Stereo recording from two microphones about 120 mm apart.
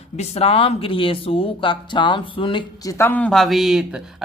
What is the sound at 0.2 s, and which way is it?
Speech, 55° left (ahead or behind).